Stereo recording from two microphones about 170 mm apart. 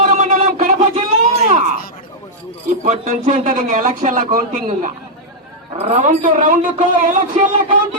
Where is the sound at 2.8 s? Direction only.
50° right (ahead or behind).